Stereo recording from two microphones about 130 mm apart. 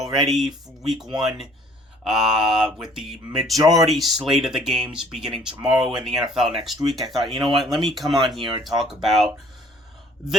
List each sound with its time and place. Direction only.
0.3 s speech: centre (ahead or behind)
2.0 s speech: 5° right (ahead or behind)
3.5 s speech: 25° right (ahead or behind)
3.8 s speech: centre (ahead or behind)